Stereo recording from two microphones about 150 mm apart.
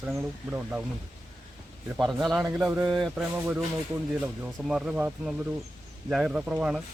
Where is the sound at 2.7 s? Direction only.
20° right (ahead or behind).